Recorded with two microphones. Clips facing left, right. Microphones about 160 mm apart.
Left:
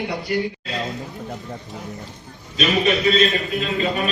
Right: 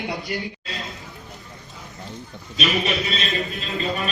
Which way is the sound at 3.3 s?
Centre (ahead or behind).